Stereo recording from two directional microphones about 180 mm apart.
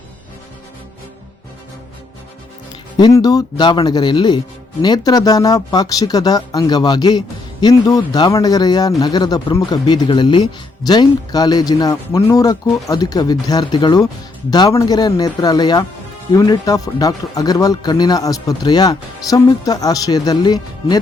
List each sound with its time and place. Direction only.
3.0 s speech: 20° left (ahead or behind)